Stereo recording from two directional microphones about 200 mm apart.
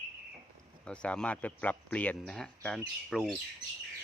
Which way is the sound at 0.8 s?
5° left (ahead or behind).